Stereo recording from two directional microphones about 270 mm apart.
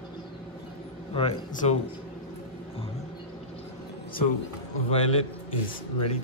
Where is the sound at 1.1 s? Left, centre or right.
Left.